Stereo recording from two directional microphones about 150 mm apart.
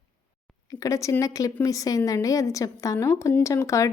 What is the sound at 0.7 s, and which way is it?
A woman's voice, 20° left (ahead or behind).